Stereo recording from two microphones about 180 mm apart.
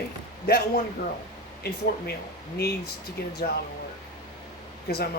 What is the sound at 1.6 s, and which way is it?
Speech, 60° left (ahead or behind).